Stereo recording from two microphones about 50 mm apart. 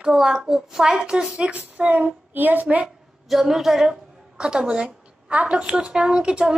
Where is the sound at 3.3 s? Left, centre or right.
Centre.